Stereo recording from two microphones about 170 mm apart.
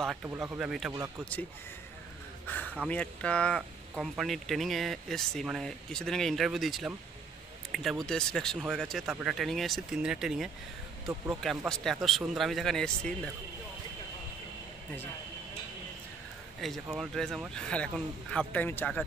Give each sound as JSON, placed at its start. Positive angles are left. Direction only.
{"t": 0.2, "sound": "speech", "side_deg": -10}
{"t": 2.4, "sound": "a sound", "side_deg": 10}
{"t": 2.9, "sound": "speech", "side_deg": 10}
{"t": 16.6, "sound": "speech", "side_deg": 0}